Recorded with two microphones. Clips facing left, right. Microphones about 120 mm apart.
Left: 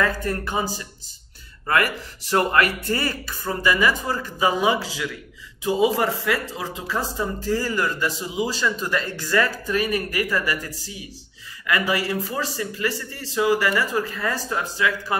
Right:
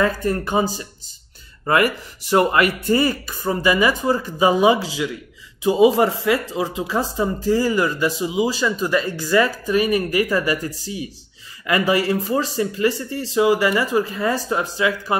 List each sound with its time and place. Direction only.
0.0 s speech: 25° right (ahead or behind)
11.6 s speech: 25° right (ahead or behind)